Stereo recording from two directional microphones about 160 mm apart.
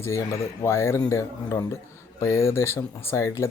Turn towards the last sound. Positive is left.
turn(degrees=20)  # may be behind; listen again after turning